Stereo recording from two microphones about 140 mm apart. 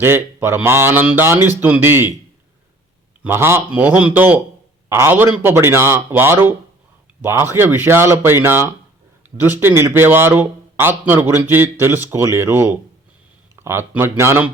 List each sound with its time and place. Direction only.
0.0 s a man's voice: 15° right (ahead or behind)
3.2 s a man's voice: 20° right (ahead or behind)